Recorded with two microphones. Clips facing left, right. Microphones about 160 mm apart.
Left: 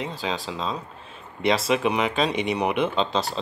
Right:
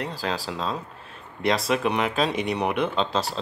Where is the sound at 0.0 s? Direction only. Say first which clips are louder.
Even; centre (ahead or behind).